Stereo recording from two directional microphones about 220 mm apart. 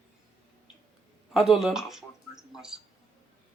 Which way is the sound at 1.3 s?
Centre (ahead or behind).